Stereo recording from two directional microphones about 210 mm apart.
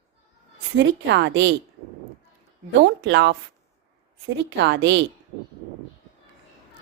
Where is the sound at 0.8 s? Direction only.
55° right (ahead or behind).